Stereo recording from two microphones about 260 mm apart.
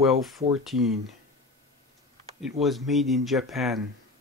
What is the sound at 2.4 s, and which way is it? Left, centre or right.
Speech, centre.